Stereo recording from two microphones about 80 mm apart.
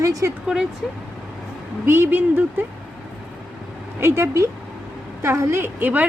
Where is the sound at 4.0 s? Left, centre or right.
Right.